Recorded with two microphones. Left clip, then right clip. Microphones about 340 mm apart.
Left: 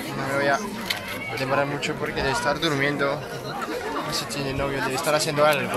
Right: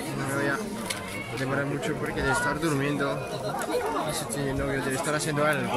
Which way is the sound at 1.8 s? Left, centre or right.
Centre.